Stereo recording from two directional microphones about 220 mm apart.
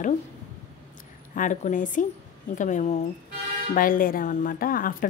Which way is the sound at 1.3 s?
35° left (ahead or behind).